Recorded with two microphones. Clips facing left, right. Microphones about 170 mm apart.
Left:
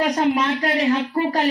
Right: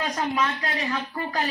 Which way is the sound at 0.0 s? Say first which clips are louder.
Left 7 dB; 70° left (ahead or behind).